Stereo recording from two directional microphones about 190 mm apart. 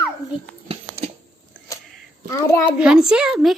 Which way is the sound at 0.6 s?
30° right (ahead or behind).